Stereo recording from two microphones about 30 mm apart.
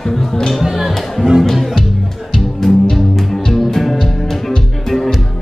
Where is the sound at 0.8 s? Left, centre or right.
Centre.